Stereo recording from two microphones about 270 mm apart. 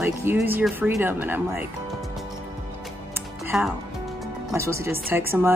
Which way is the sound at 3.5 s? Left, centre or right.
Centre.